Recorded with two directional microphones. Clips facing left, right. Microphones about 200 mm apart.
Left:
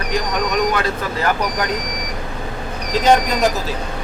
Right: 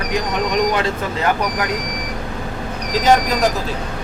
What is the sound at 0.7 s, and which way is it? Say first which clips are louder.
Speech: right 1 dB; 20° right (ahead or behind).